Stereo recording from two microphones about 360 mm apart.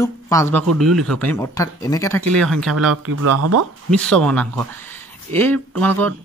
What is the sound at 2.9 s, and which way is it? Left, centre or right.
Speech, right.